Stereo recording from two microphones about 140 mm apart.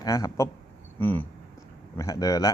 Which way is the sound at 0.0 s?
20° left (ahead or behind).